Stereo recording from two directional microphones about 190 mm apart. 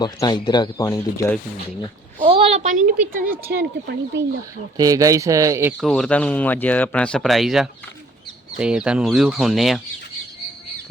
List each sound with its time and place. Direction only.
0.0 s speech: 20° left (ahead or behind)
2.2 s a woman's voice: 30° right (ahead or behind)
3.5 s speech: 60° right (ahead or behind)
4.8 s speech: 15° right (ahead or behind)
5.8 s speech: 5° left (ahead or behind)